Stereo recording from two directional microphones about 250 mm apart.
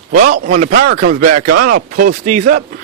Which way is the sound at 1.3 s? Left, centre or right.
Right.